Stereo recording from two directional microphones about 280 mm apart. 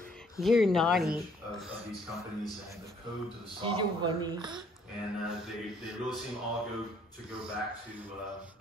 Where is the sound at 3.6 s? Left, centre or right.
Centre.